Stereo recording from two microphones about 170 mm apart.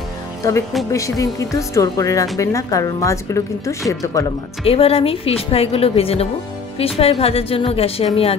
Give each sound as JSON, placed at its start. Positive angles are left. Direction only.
{"t": 0.4, "sound": "a woman's voice", "side_deg": 20}
{"t": 4.6, "sound": "speech", "side_deg": 35}